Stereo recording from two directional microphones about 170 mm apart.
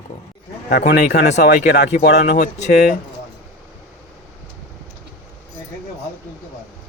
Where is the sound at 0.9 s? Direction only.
75° left (ahead or behind).